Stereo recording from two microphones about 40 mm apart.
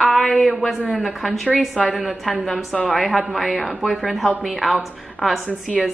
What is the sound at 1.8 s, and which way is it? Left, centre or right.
Speech, centre.